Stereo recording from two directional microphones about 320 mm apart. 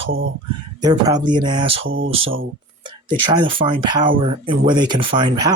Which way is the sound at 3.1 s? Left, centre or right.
Centre.